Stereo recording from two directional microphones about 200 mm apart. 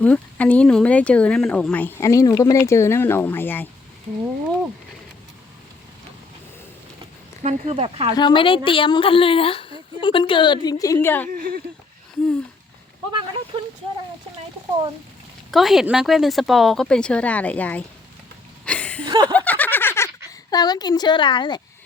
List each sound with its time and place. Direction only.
0.0 s speech: 5° left (ahead or behind)
7.4 s speech: 30° right (ahead or behind)
8.1 s a woman's voice: 25° left (ahead or behind)
11.3 s speech: 45° right (ahead or behind)
13.1 s speech: 20° right (ahead or behind)
15.5 s speech: centre (ahead or behind)
18.6 s a sound: 5° left (ahead or behind)
19.0 s snicker: 20° right (ahead or behind)
19.3 s snicker: 10° left (ahead or behind)
20.5 s a woman's voice: 20° left (ahead or behind)